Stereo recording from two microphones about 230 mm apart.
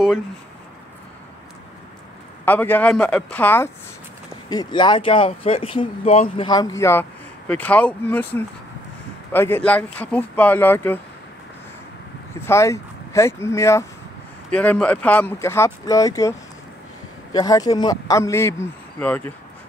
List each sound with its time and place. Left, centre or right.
2.4 s a man's voice: centre
12.4 s a man's voice: centre